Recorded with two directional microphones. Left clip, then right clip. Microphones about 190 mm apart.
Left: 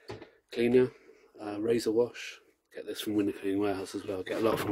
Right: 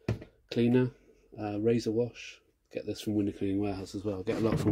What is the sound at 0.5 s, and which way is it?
Speech, 5° left (ahead or behind).